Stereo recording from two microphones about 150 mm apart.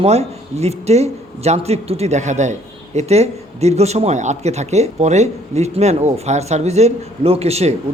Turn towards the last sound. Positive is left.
turn(degrees=-45)  # may be behind; listen again after turning